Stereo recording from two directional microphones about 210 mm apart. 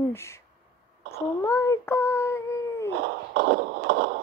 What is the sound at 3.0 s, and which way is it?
Beatboxing, 55° right (ahead or behind).